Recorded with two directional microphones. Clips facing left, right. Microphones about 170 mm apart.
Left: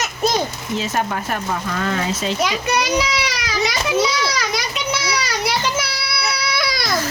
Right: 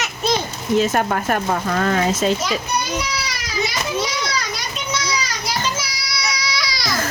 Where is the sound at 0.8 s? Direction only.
55° right (ahead or behind).